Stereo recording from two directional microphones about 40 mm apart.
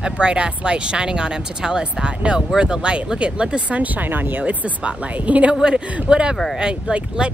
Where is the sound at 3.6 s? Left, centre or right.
Right.